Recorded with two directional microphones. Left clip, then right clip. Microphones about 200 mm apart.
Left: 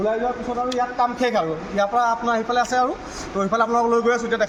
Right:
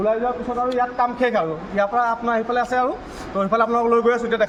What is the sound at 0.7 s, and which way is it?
A man's voice, 5° right (ahead or behind).